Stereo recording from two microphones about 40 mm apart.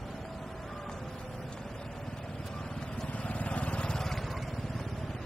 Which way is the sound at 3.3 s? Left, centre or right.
Left.